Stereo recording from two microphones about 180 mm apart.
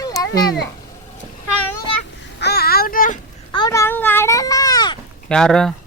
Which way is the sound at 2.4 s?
60° left (ahead or behind).